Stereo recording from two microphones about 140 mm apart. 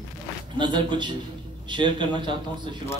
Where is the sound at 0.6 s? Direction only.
35° right (ahead or behind).